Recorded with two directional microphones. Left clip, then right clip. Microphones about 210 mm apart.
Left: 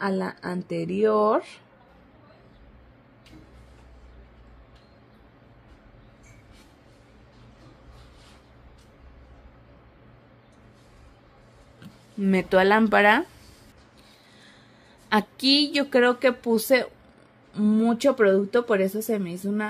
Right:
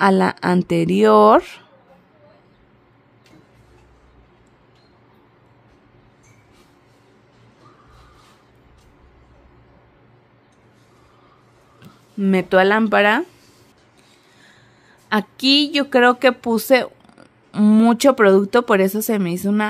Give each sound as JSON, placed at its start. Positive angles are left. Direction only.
{"t": 0.0, "sound": "speech", "side_deg": -35}
{"t": 12.2, "sound": "speech", "side_deg": -20}
{"t": 15.0, "sound": "speech", "side_deg": -15}
{"t": 17.5, "sound": "speech", "side_deg": -40}